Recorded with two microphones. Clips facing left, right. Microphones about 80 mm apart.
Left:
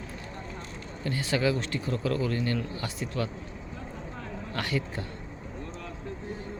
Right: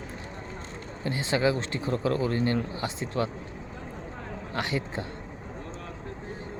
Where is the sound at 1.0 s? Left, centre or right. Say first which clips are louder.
Right 2 dB; right.